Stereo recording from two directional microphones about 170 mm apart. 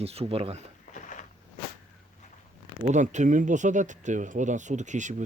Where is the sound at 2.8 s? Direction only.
45° right (ahead or behind).